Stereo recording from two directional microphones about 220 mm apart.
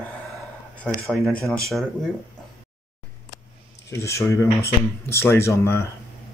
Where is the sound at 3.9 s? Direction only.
15° left (ahead or behind).